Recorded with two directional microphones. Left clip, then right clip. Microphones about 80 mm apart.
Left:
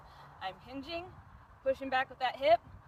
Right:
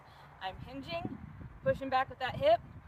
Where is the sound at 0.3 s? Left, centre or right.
Right.